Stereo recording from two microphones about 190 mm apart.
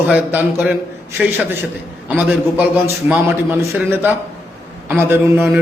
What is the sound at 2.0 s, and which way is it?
A man's voice, 5° right (ahead or behind).